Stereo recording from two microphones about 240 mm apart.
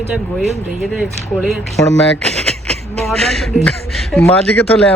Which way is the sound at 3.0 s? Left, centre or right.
Centre.